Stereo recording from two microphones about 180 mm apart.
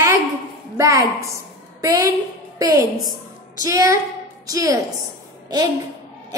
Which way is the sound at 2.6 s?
20° right (ahead or behind).